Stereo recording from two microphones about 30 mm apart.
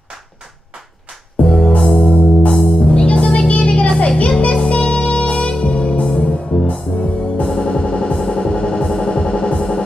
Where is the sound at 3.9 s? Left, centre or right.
Left.